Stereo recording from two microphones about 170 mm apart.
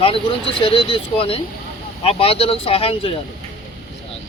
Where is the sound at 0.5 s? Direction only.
30° left (ahead or behind).